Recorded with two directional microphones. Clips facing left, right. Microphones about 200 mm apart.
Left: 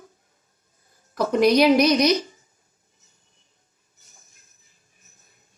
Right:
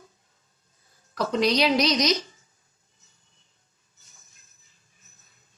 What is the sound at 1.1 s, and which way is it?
A woman's voice, 50° left (ahead or behind).